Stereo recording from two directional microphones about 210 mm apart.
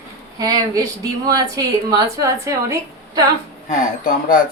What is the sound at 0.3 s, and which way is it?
A woman's voice, 20° right (ahead or behind).